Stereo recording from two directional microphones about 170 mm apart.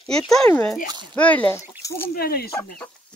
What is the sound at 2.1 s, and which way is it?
Speech, 65° left (ahead or behind).